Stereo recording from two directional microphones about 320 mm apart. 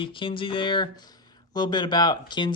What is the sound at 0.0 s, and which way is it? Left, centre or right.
Speech, centre.